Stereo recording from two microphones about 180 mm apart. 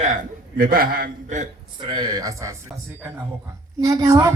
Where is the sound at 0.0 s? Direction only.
50° right (ahead or behind).